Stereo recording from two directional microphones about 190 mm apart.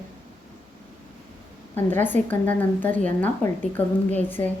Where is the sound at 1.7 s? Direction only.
10° left (ahead or behind).